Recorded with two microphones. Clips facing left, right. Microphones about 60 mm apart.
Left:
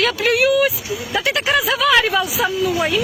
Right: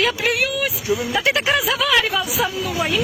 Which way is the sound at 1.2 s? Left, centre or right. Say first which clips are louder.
Left 2 dB; right.